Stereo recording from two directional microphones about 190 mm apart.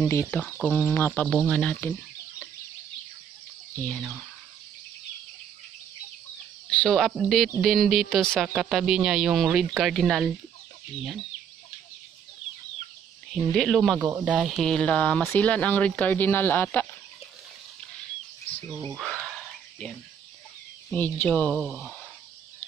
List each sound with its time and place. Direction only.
0.1 s speech: 10° left (ahead or behind)
3.7 s speech: 10° left (ahead or behind)
6.7 s speech: 5° left (ahead or behind)
13.3 s speech: 5° left (ahead or behind)
18.9 s a sound: centre (ahead or behind)
20.9 s speech: 10° left (ahead or behind)